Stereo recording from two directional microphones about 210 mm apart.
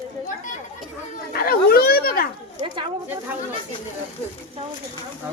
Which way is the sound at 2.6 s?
25° right (ahead or behind).